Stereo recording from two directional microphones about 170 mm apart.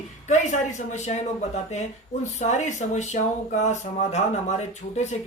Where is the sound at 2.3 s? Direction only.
45° left (ahead or behind).